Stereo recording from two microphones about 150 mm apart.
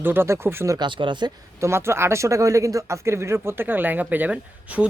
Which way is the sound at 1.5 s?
20° right (ahead or behind).